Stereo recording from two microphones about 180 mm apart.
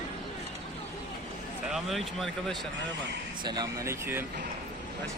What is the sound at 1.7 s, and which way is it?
Speech, centre (ahead or behind).